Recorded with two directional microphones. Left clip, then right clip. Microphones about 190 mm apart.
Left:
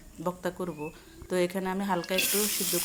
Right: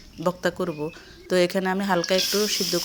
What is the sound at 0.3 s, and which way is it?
Speech, 30° right (ahead or behind).